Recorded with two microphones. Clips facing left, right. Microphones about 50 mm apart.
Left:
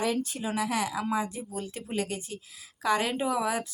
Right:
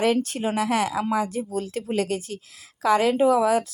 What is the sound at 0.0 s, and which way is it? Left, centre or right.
Speech, right.